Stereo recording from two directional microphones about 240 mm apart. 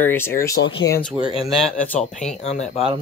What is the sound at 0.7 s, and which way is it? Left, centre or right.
Speech, left.